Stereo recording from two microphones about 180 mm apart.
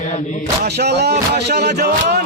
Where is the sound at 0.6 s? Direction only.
65° right (ahead or behind).